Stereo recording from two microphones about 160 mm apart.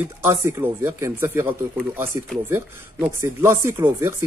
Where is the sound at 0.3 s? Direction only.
15° right (ahead or behind).